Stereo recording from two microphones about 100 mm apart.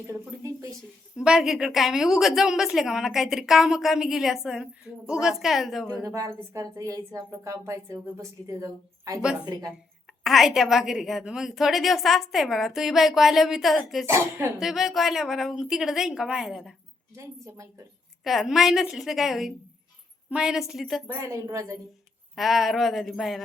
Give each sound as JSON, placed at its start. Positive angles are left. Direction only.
{"t": 0.1, "sound": "a sound", "side_deg": -30}
{"t": 1.1, "sound": "a woman's voice", "side_deg": -5}
{"t": 6.1, "sound": "a woman's voice", "side_deg": -30}
{"t": 10.2, "sound": "a woman's voice", "side_deg": 0}
{"t": 14.1, "sound": "speech", "side_deg": -25}
{"t": 14.6, "sound": "a woman's voice", "side_deg": -5}
{"t": 17.2, "sound": "a woman's voice", "side_deg": -30}
{"t": 18.2, "sound": "a woman's voice", "side_deg": 0}
{"t": 21.1, "sound": "a woman's voice", "side_deg": -30}
{"t": 22.4, "sound": "a woman's voice", "side_deg": 0}